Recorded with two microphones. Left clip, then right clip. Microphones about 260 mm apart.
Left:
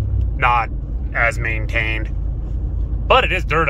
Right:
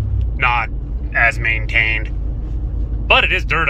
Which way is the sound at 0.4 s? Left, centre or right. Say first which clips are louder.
Even; centre.